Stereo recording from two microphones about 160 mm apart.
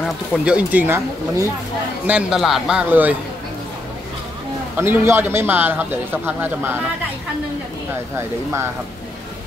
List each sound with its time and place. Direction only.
0.5 s a man's voice: 10° right (ahead or behind)
4.7 s a man's voice: 15° right (ahead or behind)